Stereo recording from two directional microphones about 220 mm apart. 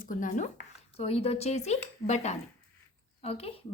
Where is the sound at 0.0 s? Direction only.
35° left (ahead or behind).